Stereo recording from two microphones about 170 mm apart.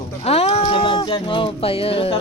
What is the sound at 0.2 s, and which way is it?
Speech, 35° left (ahead or behind).